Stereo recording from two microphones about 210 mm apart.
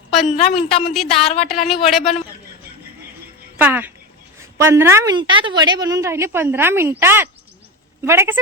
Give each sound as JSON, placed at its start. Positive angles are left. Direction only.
{"t": 0.1, "sound": "a sound", "side_deg": 0}
{"t": 0.3, "sound": "a woman's voice", "side_deg": 30}
{"t": 1.9, "sound": "speech", "side_deg": 0}
{"t": 3.6, "sound": "a woman's voice", "side_deg": -10}